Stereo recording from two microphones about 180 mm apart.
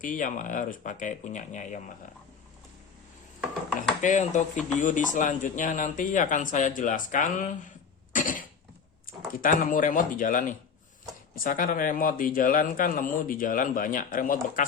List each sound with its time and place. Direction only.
0.0 s a man's voice: 45° left (ahead or behind)
4.0 s a man's voice: 45° left (ahead or behind)
8.1 s cough: 50° left (ahead or behind)
9.0 s a man's voice: 50° left (ahead or behind)